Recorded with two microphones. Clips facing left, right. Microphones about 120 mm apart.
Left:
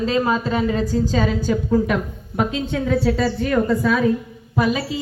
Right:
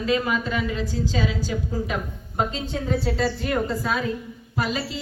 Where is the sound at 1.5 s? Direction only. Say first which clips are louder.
Left 8 dB; 65° left (ahead or behind); by 3.1 s 85° left.